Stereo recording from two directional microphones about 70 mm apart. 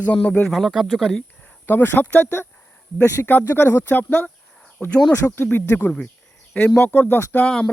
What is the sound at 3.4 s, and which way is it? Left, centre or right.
Speech, left.